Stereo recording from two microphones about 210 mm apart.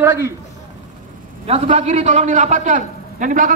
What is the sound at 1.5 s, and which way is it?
A man's voice, 30° right (ahead or behind).